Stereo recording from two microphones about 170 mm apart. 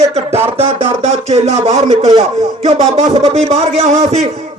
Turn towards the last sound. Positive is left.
turn(degrees=-40)  # may be behind; listen again after turning